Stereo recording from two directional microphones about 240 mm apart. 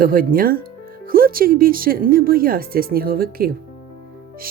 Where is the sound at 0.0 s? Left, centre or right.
Right.